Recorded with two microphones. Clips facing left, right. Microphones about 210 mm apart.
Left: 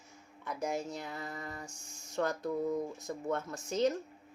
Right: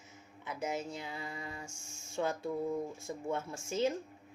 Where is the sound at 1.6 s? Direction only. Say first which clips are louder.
Left 1 dB; 25° right (ahead or behind).